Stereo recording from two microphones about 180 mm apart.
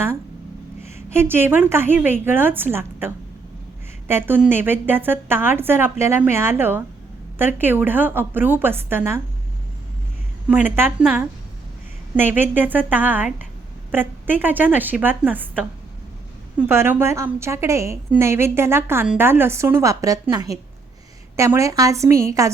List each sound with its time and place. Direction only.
0.9 s a woman's voice: 15° right (ahead or behind)
4.1 s a woman's voice: 10° right (ahead or behind)
10.5 s a woman's voice: 10° right (ahead or behind)